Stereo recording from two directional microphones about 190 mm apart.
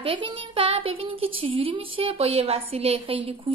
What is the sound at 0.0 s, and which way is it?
A woman's voice, 25° right (ahead or behind).